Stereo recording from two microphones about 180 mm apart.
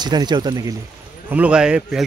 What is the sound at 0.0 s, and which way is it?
Speech, 25° right (ahead or behind).